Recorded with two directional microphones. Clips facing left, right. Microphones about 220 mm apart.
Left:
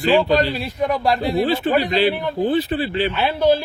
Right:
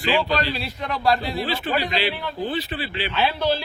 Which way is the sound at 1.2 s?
50° left (ahead or behind).